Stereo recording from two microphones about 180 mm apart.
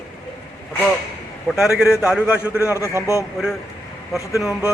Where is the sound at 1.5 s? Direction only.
Centre (ahead or behind).